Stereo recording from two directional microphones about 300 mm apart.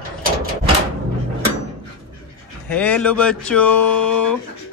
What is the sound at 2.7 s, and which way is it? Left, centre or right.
A man's voice, centre.